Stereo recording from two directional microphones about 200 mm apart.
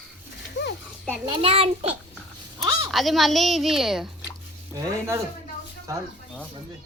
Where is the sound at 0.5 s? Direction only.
55° left (ahead or behind).